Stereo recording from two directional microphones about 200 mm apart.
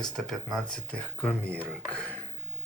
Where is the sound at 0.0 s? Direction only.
Centre (ahead or behind).